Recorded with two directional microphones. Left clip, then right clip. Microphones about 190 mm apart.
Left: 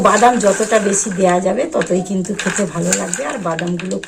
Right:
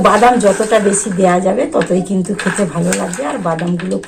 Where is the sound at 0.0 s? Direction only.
10° left (ahead or behind).